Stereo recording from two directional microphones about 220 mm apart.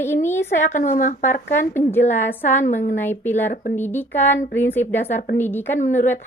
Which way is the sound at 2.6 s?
35° left (ahead or behind).